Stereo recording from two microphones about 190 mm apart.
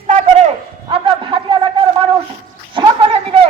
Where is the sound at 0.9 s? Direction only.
25° right (ahead or behind).